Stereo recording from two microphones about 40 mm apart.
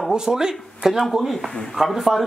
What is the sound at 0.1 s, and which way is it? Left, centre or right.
Speech, centre.